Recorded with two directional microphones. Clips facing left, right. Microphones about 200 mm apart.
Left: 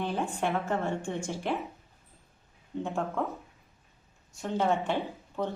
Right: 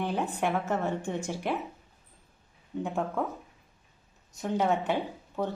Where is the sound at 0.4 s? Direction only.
10° right (ahead or behind).